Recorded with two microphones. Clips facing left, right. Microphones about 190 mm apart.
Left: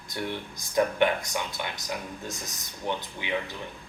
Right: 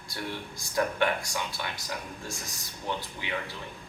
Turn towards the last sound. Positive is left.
turn(degrees=20)  # may be behind; listen again after turning